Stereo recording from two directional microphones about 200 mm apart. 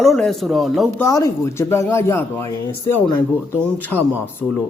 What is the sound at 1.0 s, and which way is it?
A man's voice, 15° left (ahead or behind).